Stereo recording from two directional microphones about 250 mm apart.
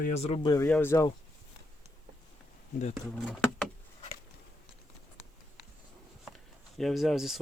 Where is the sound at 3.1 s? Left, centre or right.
Centre.